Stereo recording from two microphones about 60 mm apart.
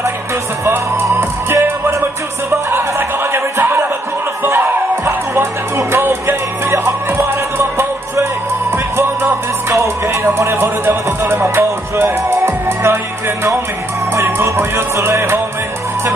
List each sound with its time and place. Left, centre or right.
1.1 s music: right
8.9 s music: right